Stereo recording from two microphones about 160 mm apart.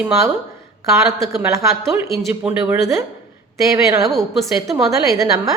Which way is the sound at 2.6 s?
20° right (ahead or behind).